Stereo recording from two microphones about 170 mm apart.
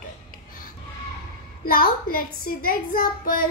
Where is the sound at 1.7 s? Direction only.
60° left (ahead or behind).